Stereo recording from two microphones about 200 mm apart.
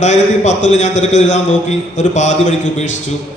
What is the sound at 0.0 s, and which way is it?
A man's voice, 35° left (ahead or behind).